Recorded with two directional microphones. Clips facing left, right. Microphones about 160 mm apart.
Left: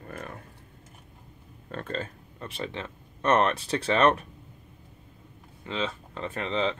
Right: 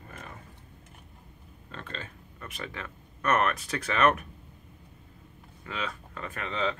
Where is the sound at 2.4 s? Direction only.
30° left (ahead or behind).